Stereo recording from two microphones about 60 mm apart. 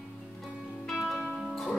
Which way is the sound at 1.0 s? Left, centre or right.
Centre.